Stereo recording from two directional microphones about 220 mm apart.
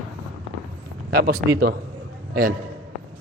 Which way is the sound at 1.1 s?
45° right (ahead or behind).